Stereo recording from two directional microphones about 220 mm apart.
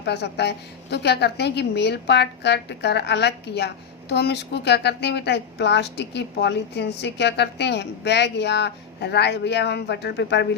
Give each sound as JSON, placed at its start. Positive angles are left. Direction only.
{"t": 0.0, "sound": "speech", "side_deg": 50}